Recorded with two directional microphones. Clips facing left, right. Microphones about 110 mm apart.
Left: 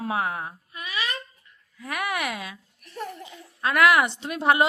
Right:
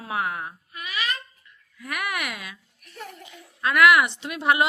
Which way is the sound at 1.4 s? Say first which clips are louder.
Left 1 dB; 30° left (ahead or behind).